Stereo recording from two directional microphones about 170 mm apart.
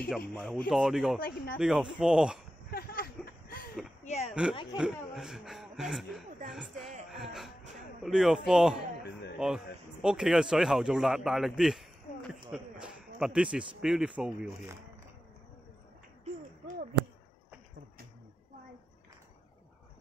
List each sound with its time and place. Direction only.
0.3 s speech: 5° left (ahead or behind)
1.2 s speech: 60° left (ahead or behind)
1.6 s speech: 5° right (ahead or behind)
2.7 s a sound: 60° left (ahead or behind)
4.0 s a sound: 40° left (ahead or behind)
4.3 s speech: 5° right (ahead or behind)
7.1 s music: centre (ahead or behind)
8.0 s a man's voice: centre (ahead or behind)